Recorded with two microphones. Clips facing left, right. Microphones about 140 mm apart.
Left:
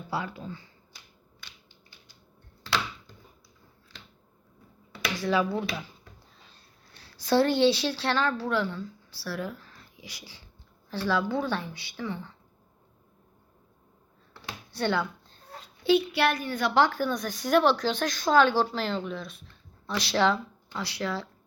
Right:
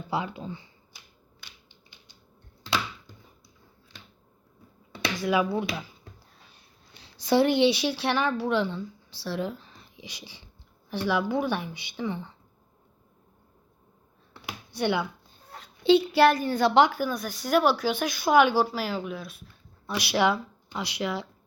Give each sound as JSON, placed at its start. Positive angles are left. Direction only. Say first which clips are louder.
{"t": 0.1, "sound": "speech", "louder": "right 3 dB", "side_deg": -20}
{"t": 1.4, "sound": "typewriter", "louder": "left 1 dB", "side_deg": -10}
{"t": 4.9, "sound": "speech", "louder": "right 1 dB", "side_deg": -15}
{"t": 14.4, "sound": "a sound", "louder": "right 2 dB", "side_deg": -15}
{"t": 15.8, "sound": "a child's voice", "louder": "right 4 dB", "side_deg": -25}
{"t": 16.7, "sound": "speech", "louder": "left 1 dB", "side_deg": -10}